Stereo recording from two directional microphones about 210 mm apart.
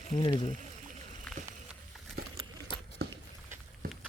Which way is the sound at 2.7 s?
25° left (ahead or behind).